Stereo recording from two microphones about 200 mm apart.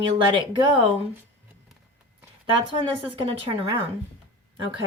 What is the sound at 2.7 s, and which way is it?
Speech, 25° right (ahead or behind).